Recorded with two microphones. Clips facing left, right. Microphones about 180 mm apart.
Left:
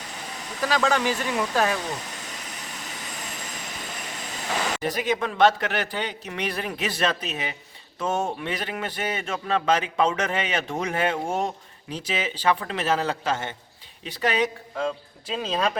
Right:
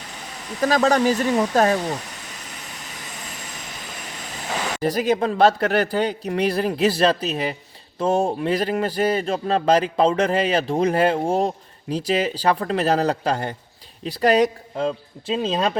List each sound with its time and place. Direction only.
0.6 s speech: 40° right (ahead or behind)
4.8 s speech: 35° right (ahead or behind)